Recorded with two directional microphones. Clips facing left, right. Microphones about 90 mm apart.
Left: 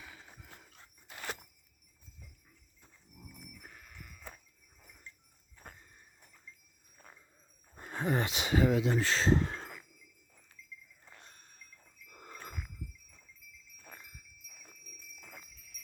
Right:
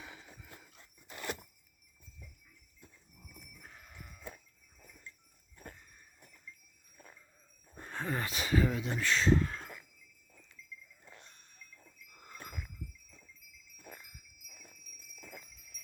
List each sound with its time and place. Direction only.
7.8 s speech: 10° left (ahead or behind); by 9.6 s 30° left (ahead or behind)